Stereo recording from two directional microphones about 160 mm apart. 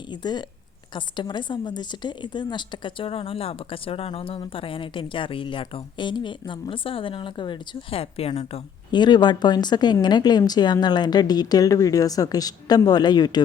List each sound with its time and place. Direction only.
0.1 s a woman's voice: 25° left (ahead or behind)